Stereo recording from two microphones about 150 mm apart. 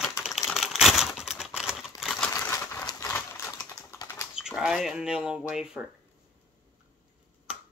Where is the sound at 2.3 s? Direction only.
20° left (ahead or behind).